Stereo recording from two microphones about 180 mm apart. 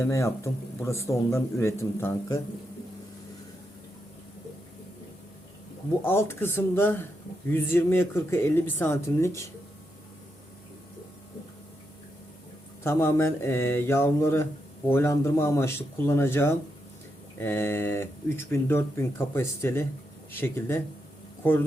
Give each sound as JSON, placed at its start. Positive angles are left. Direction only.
{"t": 0.0, "sound": "speech", "side_deg": 15}
{"t": 6.1, "sound": "speech", "side_deg": 15}
{"t": 12.8, "sound": "speech", "side_deg": 15}